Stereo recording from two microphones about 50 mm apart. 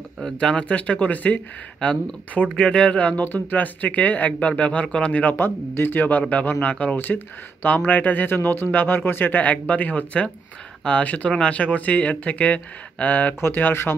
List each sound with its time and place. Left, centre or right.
0.2 s speech: centre
5.3 s speech: left